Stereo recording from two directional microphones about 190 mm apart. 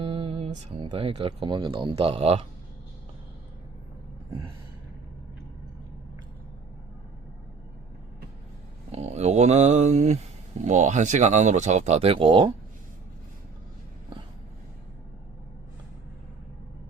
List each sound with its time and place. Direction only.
0.0 s speech: 30° right (ahead or behind)
8.9 s a sound: 35° right (ahead or behind)
10.6 s speech: 40° right (ahead or behind)